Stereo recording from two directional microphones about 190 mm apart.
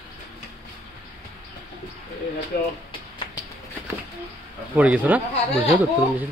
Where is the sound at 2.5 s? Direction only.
50° left (ahead or behind).